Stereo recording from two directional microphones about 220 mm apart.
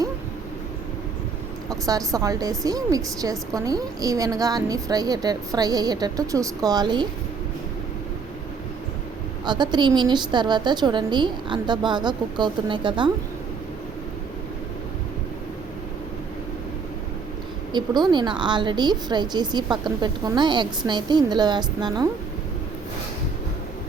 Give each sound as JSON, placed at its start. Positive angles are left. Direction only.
{"t": 1.7, "sound": "a woman's voice", "side_deg": -15}
{"t": 9.4, "sound": "a woman's voice", "side_deg": -20}
{"t": 17.7, "sound": "a woman's voice", "side_deg": -20}